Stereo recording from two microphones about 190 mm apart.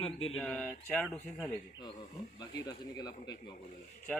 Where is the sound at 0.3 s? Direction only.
5° left (ahead or behind).